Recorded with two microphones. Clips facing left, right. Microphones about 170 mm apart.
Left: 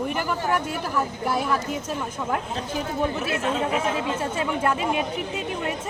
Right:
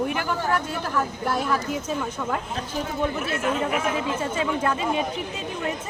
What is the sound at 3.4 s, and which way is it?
Speech, 30° left (ahead or behind).